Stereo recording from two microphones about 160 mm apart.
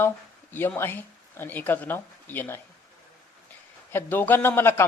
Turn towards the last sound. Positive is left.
turn(degrees=15)  # may be behind; listen again after turning